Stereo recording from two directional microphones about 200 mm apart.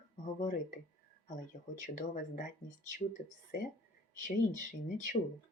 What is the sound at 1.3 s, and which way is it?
Speech, 40° left (ahead or behind).